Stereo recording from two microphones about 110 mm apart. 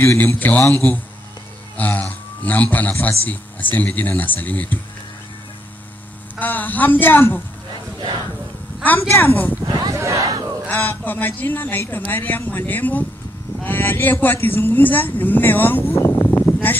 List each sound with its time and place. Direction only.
0.0 s a man's voice: 25° left (ahead or behind)
6.4 s speech: 15° left (ahead or behind)
8.8 s speech: 20° left (ahead or behind)
9.7 s a sound: 35° right (ahead or behind)
10.7 s speech: 20° left (ahead or behind)